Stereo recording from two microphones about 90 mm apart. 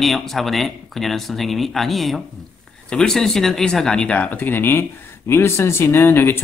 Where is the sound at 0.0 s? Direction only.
Centre (ahead or behind).